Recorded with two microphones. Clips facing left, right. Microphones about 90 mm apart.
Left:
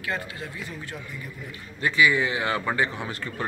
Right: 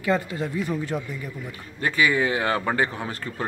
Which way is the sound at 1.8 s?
40° right (ahead or behind).